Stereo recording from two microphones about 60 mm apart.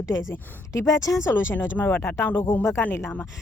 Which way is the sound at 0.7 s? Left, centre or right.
Left.